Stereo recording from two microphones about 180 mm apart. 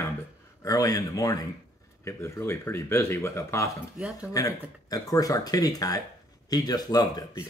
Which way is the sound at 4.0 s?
5° right (ahead or behind).